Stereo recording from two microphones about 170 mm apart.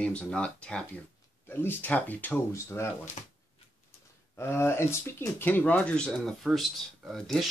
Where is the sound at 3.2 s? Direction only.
40° left (ahead or behind).